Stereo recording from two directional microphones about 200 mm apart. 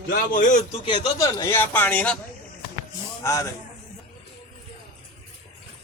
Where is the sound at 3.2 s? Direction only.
15° left (ahead or behind).